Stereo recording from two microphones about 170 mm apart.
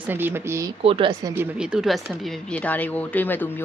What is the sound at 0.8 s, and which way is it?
Speech, 35° right (ahead or behind).